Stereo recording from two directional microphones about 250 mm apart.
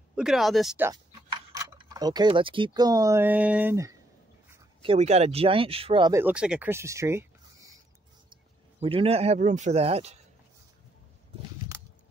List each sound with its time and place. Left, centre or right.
0.1 s speech: centre
4.8 s speech: right
8.7 s speech: right